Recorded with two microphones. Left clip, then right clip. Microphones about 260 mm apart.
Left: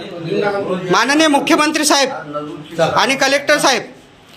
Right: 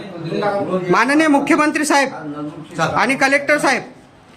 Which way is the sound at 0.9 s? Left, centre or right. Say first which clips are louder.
Left 2 dB; centre.